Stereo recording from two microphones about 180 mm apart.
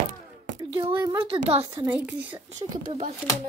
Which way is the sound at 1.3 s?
35° right (ahead or behind).